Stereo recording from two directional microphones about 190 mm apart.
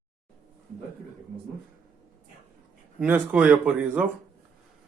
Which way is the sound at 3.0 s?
10° right (ahead or behind).